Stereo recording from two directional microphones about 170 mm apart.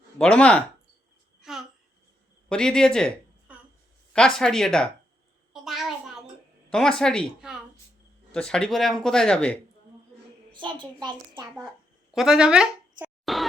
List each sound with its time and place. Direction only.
0.2 s speech: 5° left (ahead or behind)
1.4 s babbling: centre (ahead or behind)
2.5 s speech: 5° left (ahead or behind)
3.5 s a sound: 10° right (ahead or behind)
4.1 s speech: 5° left (ahead or behind)
5.5 s a sound: centre (ahead or behind)
6.7 s speech: 5° left (ahead or behind)
10.5 s a child's voice: 30° right (ahead or behind)
12.1 s a sound: 5° right (ahead or behind)